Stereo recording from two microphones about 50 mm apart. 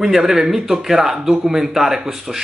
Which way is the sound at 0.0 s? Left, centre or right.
Centre.